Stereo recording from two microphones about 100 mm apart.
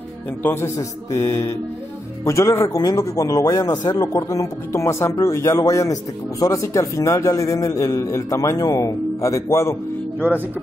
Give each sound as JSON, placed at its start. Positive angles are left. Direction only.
{"t": 0.4, "sound": "speech", "side_deg": 25}
{"t": 2.8, "sound": "a man's voice", "side_deg": 40}